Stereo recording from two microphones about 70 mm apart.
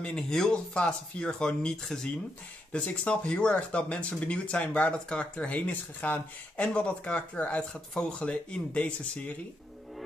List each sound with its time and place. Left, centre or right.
0.0 s speech: centre